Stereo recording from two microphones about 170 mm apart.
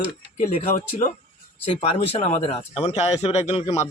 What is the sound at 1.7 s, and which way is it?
A man's voice, 35° left (ahead or behind).